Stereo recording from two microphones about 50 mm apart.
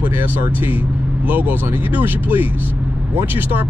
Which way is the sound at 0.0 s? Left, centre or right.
Right.